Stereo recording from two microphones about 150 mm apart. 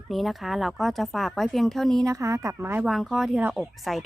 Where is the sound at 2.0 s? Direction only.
20° right (ahead or behind).